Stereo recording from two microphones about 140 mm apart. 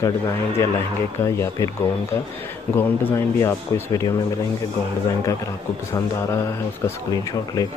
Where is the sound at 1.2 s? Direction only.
20° left (ahead or behind).